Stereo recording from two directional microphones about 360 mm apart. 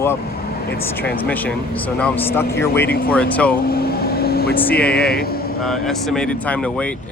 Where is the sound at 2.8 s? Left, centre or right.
Left.